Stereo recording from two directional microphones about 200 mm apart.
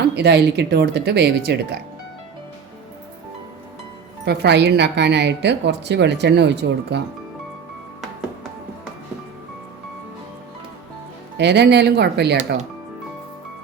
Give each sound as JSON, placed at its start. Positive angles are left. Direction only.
{"t": 0.2, "sound": "a woman's voice", "side_deg": -55}
{"t": 4.3, "sound": "a woman's voice", "side_deg": -55}
{"t": 11.3, "sound": "a woman's voice", "side_deg": -55}